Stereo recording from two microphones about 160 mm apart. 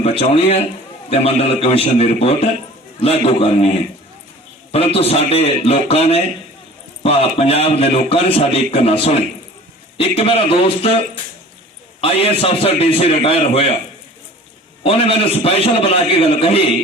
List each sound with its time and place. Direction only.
0.0 s a man's voice: 35° left (ahead or behind)
4.7 s a man's voice: 35° left (ahead or behind)
14.8 s a man's voice: 35° left (ahead or behind)